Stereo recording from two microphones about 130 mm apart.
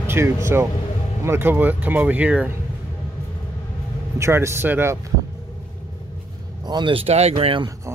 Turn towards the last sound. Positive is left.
turn(degrees=-40)  # may be behind; listen again after turning